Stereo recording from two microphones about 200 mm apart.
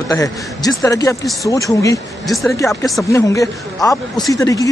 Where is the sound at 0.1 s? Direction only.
20° left (ahead or behind).